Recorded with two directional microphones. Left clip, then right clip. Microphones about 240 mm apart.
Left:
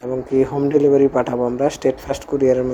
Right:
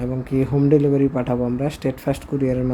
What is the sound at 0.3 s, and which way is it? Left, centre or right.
Speech, centre.